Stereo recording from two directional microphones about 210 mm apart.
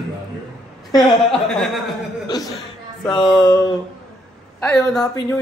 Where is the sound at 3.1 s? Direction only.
20° left (ahead or behind).